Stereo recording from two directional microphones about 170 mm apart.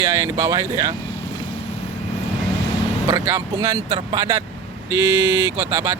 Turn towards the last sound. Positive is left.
turn(degrees=-15)  # may be behind; listen again after turning